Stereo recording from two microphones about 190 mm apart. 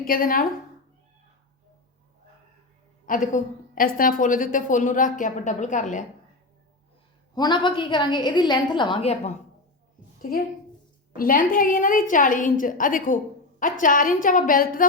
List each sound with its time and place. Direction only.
0.0 s a woman's voice: 50° left (ahead or behind)
3.1 s a woman's voice: 45° left (ahead or behind)
7.3 s a woman's voice: 25° left (ahead or behind)
11.2 s a woman's voice: 50° left (ahead or behind)